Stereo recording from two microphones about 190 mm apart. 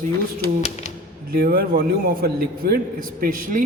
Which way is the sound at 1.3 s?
50° right (ahead or behind).